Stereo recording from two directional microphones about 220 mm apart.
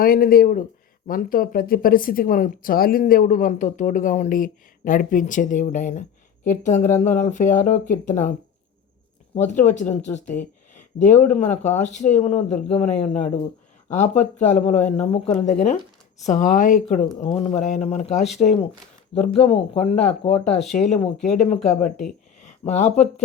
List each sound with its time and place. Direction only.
0.0 s speech: 40° left (ahead or behind)
9.3 s speech: 35° left (ahead or behind)